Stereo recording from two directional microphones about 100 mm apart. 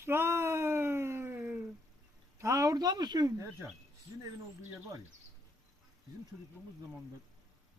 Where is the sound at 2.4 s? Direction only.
35° right (ahead or behind).